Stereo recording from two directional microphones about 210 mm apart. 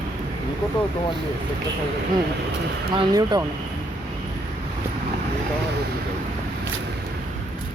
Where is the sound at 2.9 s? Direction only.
20° right (ahead or behind).